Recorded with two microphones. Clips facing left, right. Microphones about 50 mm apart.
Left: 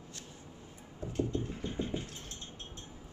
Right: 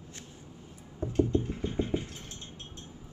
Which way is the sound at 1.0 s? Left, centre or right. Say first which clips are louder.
Right 7 dB; right.